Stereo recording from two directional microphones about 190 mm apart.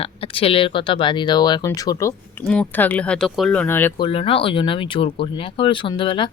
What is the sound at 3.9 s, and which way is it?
Speech, 30° left (ahead or behind).